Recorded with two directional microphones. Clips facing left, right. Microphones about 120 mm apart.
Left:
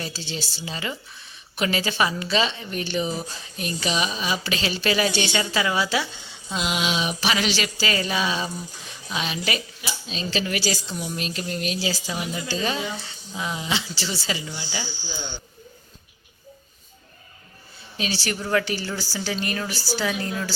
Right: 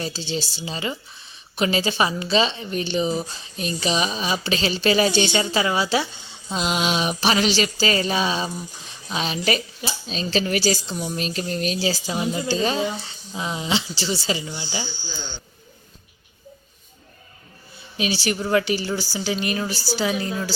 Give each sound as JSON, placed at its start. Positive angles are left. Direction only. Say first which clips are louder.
{"t": 0.0, "sound": "a woman's voice", "louder": "right 5 dB", "side_deg": -25}
{"t": 6.5, "sound": "a sound", "louder": "right 3 dB", "side_deg": -35}
{"t": 13.3, "sound": "a woman's voice", "louder": "right 3 dB", "side_deg": -25}
{"t": 14.8, "sound": "speech", "louder": "left 1 dB", "side_deg": 10}
{"t": 17.9, "sound": "a woman's voice", "louder": "right 4 dB", "side_deg": -15}